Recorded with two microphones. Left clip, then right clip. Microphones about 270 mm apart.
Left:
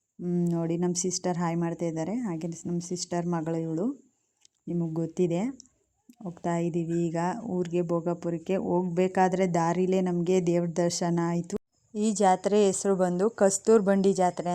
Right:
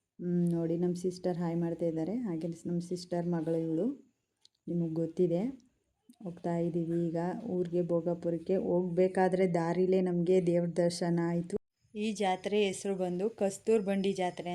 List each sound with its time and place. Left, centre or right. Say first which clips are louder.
0.2 s speech: left 3 dB; left